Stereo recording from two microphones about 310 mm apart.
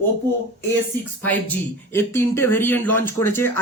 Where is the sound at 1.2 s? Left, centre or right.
Centre.